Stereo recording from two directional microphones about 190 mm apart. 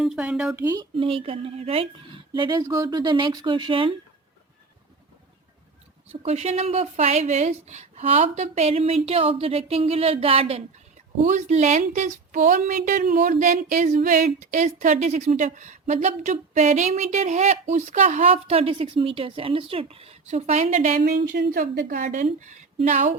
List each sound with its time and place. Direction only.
0.0 s speech: 5° right (ahead or behind)
0.6 s speech: 20° right (ahead or behind)
6.1 s speech: 35° right (ahead or behind)
21.3 s a woman's voice: 60° right (ahead or behind)
21.6 s speech: 45° right (ahead or behind)